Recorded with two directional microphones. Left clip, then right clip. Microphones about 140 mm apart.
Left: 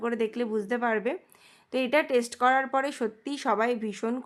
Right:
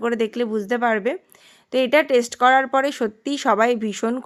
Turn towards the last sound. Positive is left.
turn(degrees=-35)  # may be behind; listen again after turning